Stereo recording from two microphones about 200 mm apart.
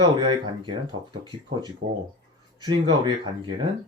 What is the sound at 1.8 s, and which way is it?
Speech, 65° right (ahead or behind).